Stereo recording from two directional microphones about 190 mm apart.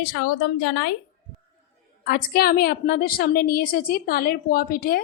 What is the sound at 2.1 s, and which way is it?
A woman's voice, 55° left (ahead or behind).